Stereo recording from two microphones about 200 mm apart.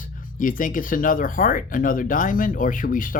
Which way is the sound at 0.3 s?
40° left (ahead or behind).